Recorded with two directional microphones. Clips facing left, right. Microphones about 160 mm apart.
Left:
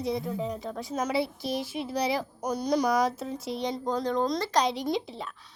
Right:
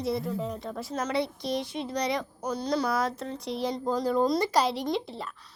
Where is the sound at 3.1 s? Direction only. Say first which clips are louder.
Left 1 dB; 5° left (ahead or behind).